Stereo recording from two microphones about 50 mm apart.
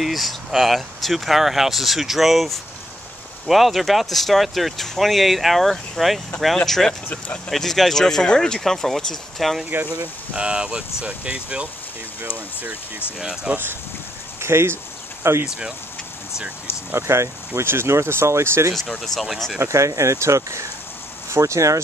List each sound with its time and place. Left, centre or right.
0.0 s speech: centre
10.3 s speech: centre
13.2 s speech: centre
14.4 s speech: right
15.4 s speech: centre
16.9 s speech: right
18.9 s speech: centre
19.7 s speech: right